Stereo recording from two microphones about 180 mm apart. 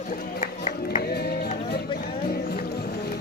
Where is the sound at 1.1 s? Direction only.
60° left (ahead or behind).